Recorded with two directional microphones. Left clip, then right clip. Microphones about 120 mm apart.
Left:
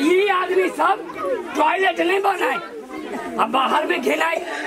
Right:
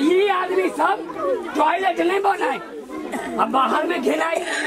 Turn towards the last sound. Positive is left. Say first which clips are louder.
# left 1 dB
turn(degrees=10)  # may be behind; listen again after turning